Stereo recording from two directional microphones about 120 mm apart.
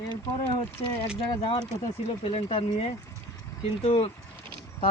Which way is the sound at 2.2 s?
55° left (ahead or behind).